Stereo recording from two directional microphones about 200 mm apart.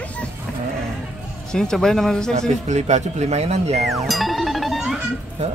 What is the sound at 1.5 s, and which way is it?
Speech, 5° left (ahead or behind).